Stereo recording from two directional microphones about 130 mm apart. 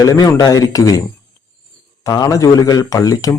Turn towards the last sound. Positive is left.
turn(degrees=25)  # may be behind; listen again after turning